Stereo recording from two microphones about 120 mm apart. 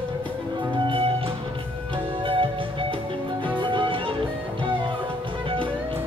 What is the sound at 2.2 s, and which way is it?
Music, 45° right (ahead or behind).